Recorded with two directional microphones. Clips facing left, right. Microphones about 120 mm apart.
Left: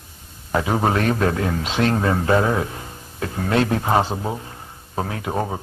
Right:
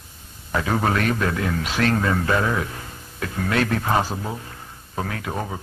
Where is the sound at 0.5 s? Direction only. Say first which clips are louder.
Left 2 dB; 20° left (ahead or behind).